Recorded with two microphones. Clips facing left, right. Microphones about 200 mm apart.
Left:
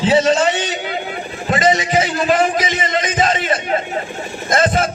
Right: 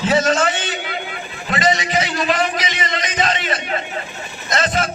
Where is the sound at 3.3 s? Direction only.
30° left (ahead or behind).